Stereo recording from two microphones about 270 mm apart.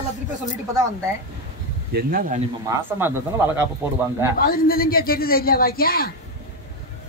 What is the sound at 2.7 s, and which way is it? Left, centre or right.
A man's voice, centre.